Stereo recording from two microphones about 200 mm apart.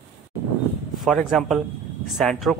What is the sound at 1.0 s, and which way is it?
Speech, centre (ahead or behind).